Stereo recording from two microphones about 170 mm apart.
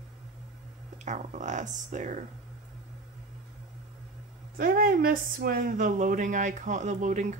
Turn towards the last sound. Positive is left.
turn(degrees=-45)  # may be behind; listen again after turning